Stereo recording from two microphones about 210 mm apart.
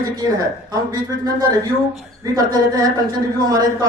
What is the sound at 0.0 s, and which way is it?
A man's voice, 20° right (ahead or behind).